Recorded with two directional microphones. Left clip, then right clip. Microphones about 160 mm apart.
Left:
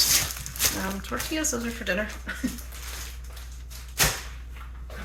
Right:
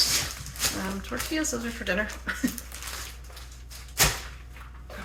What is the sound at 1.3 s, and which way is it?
Speech, 20° left (ahead or behind).